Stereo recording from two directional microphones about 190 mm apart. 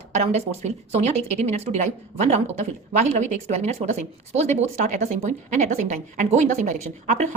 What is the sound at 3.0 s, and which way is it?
A woman's voice, 35° right (ahead or behind).